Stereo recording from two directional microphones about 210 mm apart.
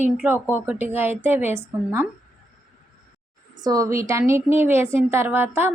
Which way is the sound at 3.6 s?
15° right (ahead or behind).